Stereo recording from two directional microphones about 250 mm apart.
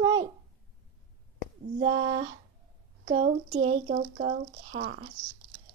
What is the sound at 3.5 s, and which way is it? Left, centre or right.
Speech, right.